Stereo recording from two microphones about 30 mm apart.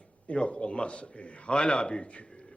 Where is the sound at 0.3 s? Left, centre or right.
Left.